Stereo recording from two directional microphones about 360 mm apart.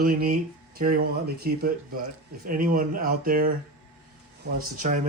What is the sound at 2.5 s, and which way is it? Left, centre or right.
Speech, right.